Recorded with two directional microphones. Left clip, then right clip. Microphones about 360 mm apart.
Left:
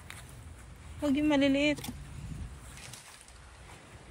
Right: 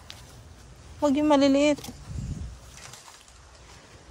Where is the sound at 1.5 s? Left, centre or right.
Right.